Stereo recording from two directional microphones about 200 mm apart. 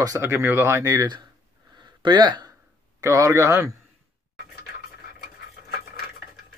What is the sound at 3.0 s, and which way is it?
Speech, 15° right (ahead or behind).